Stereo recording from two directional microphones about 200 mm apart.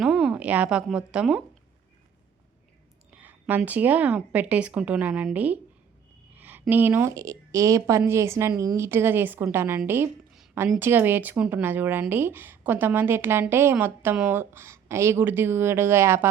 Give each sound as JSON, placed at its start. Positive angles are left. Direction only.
{"t": 0.0, "sound": "a woman's voice", "side_deg": -5}
{"t": 3.2, "sound": "a sound", "side_deg": -10}
{"t": 3.7, "sound": "a woman's voice", "side_deg": -10}